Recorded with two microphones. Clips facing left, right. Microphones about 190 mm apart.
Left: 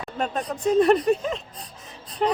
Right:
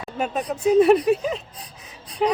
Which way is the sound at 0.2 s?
5° right (ahead or behind).